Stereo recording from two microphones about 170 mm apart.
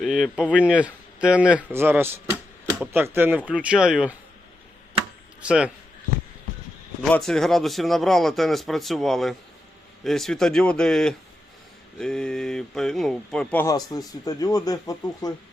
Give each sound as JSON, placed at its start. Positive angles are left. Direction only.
{"t": 0.0, "sound": "speech", "side_deg": 0}
{"t": 5.4, "sound": "a man's voice", "side_deg": -5}
{"t": 7.1, "sound": "a man's voice", "side_deg": 5}
{"t": 13.7, "sound": "speech", "side_deg": 20}